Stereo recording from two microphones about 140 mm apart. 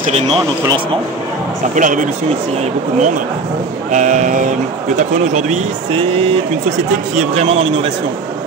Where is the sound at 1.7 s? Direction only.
70° right (ahead or behind).